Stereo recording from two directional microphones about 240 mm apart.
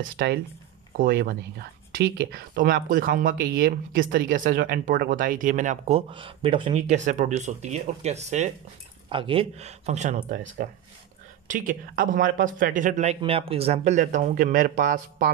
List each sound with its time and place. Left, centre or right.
0.2 s speech: right